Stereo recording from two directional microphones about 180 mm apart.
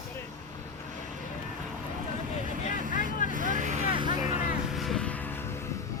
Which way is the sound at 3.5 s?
45° right (ahead or behind).